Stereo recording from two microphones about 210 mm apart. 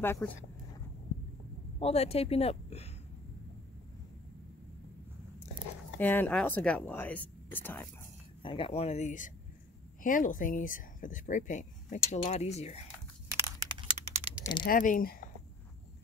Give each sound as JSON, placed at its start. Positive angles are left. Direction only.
{"t": 0.0, "sound": "speech", "side_deg": 10}
{"t": 1.8, "sound": "speech", "side_deg": 30}
{"t": 5.9, "sound": "speech", "side_deg": 10}
{"t": 8.4, "sound": "speech", "side_deg": 25}
{"t": 13.6, "sound": "a sound", "side_deg": -25}
{"t": 14.4, "sound": "speech", "side_deg": 20}
{"t": 14.7, "sound": "speech", "side_deg": 40}